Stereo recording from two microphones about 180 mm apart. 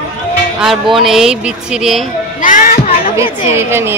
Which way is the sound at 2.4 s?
50° left (ahead or behind).